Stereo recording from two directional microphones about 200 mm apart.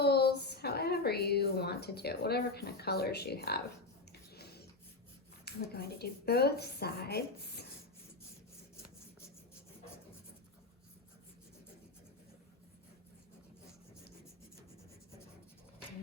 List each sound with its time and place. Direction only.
0.0 s a woman's voice: 55° left (ahead or behind)
4.1 s a sound: 55° left (ahead or behind)
5.7 s speech: 50° left (ahead or behind)